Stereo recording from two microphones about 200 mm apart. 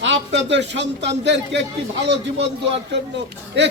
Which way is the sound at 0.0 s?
65° right (ahead or behind).